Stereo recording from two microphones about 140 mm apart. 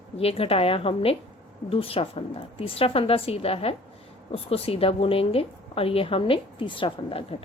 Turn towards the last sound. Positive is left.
turn(degrees=40)  # may be behind; listen again after turning